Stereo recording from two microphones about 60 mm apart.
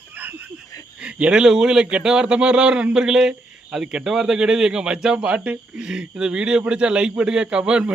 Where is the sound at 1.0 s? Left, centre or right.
Centre.